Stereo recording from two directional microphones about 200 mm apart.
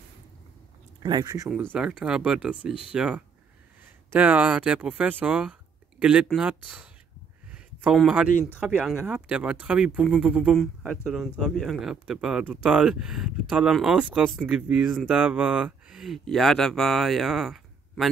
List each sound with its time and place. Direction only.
1.0 s speech: 20° right (ahead or behind)
1.5 s speech: 5° right (ahead or behind)